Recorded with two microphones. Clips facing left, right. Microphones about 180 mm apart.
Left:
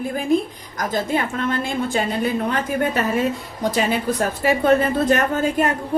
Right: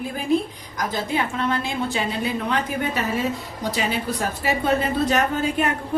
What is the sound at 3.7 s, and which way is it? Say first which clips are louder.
A woman's voice: left 5 dB; 50° left (ahead or behind).